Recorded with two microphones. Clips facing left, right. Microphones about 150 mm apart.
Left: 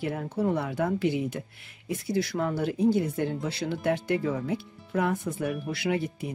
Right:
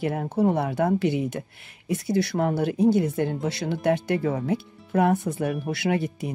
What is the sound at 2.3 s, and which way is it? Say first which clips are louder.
Speech: right 4 dB; 55° right (ahead or behind).